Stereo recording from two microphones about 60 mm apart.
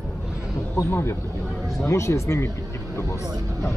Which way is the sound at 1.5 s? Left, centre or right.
Centre.